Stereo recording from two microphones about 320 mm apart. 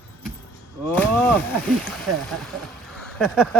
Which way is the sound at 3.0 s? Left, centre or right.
Centre.